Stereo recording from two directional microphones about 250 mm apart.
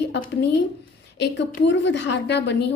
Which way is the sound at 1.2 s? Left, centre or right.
Left.